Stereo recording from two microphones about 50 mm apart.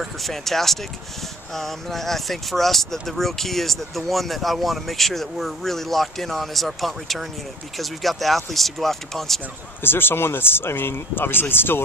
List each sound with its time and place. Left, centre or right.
0.0 s speech: centre
9.8 s speech: left